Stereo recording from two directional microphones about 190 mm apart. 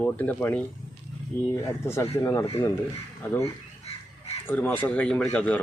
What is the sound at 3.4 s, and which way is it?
Crow, 30° left (ahead or behind).